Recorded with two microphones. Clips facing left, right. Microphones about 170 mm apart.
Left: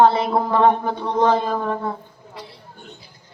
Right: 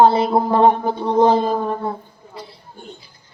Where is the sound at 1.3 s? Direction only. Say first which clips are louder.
Right 3 dB; 35° right (ahead or behind).